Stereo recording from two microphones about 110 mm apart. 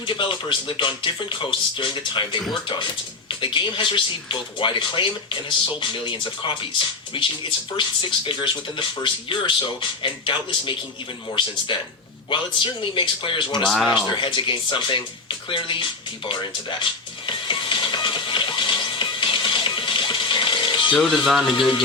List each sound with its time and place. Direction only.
0.0 s speech: 50° left (ahead or behind)
15.4 s music: 50° left (ahead or behind)
21.2 s speech: centre (ahead or behind)